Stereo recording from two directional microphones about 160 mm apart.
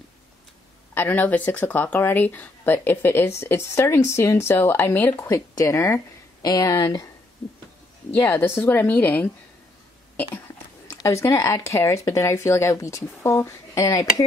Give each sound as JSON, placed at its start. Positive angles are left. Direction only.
{"t": 0.9, "sound": "speech", "side_deg": 10}
{"t": 8.1, "sound": "speech", "side_deg": 10}
{"t": 10.9, "sound": "speech", "side_deg": 20}